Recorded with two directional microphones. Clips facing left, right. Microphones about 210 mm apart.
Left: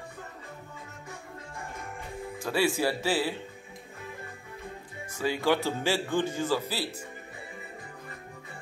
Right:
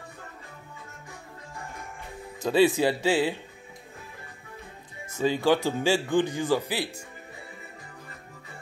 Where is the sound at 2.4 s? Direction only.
20° right (ahead or behind).